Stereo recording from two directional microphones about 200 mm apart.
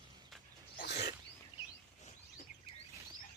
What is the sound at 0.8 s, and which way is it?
Wild animals, 55° left (ahead or behind).